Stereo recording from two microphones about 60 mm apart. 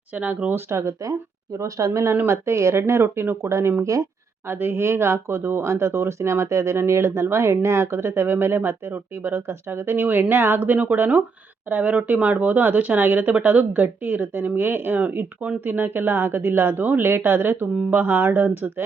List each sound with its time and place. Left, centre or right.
0.1 s speech: right
0.7 s speech: right
1.5 s speech: right
1.9 s speech: right